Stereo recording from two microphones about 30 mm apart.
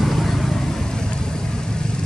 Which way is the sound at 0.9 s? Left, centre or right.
Left.